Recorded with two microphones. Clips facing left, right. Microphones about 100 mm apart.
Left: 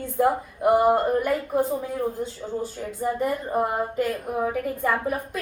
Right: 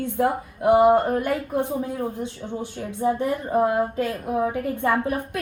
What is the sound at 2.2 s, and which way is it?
Speech, 65° right (ahead or behind).